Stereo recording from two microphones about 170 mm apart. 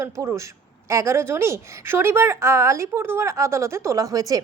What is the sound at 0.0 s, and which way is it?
A woman's voice, 15° right (ahead or behind).